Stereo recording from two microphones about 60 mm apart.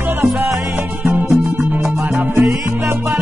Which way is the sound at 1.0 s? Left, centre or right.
Right.